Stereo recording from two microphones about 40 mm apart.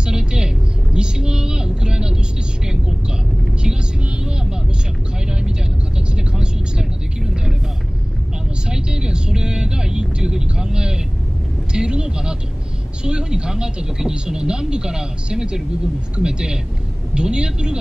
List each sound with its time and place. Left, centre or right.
0.0 s vehicle: right
5.9 s vehicle: right
8.6 s vehicle: right
13.0 s a woman's voice: right